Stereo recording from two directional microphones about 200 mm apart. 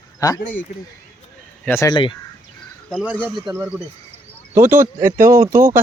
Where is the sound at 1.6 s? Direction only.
15° left (ahead or behind).